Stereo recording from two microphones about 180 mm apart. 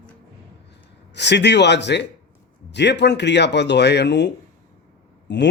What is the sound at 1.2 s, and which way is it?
A man's voice, 70° left (ahead or behind).